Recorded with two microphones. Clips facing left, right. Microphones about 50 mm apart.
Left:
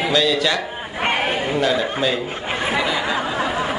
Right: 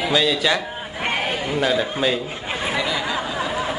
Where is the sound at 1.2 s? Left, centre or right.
Left.